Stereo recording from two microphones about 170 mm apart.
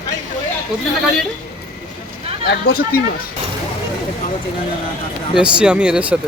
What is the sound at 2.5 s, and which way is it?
Speech, 65° left (ahead or behind).